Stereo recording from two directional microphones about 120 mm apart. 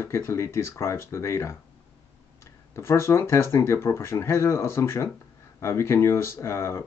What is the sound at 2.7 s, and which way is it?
Speech, 20° left (ahead or behind).